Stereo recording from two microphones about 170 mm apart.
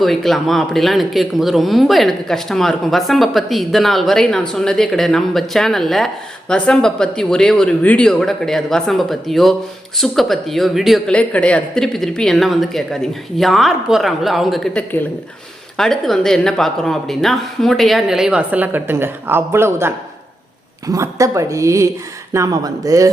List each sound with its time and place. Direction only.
0.0 s a woman's voice: centre (ahead or behind); by 23.1 s 20° right (ahead or behind)